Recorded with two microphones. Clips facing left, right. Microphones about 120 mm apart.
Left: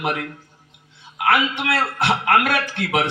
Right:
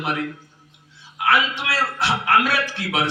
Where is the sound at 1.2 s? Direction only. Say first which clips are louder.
Left 1 dB; 50° left (ahead or behind).